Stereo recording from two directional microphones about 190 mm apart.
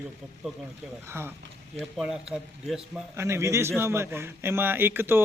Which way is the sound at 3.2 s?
15° right (ahead or behind).